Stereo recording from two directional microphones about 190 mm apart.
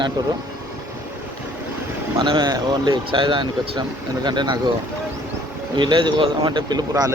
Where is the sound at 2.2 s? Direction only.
20° right (ahead or behind).